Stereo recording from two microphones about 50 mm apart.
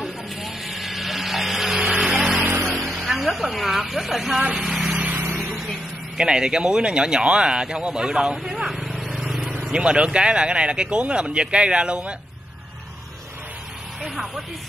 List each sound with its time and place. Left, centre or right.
0.0 s vehicle: centre
1.8 s a sound: centre
2.6 s vehicle: centre
4.6 s a sound: centre
5.5 s vehicle: centre
6.1 s speech: centre
9.0 s vehicle: centre
9.7 s speech: centre
14.0 s speech: centre